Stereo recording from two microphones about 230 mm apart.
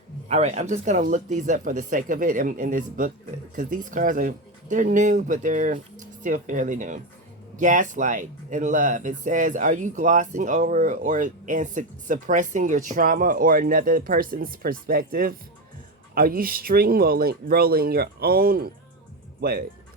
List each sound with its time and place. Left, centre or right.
0.3 s speech: right